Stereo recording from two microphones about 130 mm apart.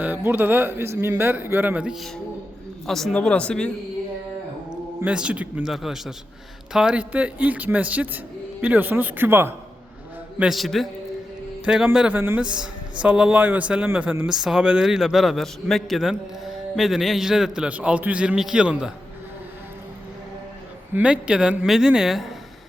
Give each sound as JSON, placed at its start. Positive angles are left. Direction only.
{"t": 0.0, "sound": "speech", "side_deg": -15}
{"t": 4.7, "sound": "speech", "side_deg": -5}
{"t": 10.3, "sound": "speech", "side_deg": -5}
{"t": 20.9, "sound": "speech", "side_deg": -10}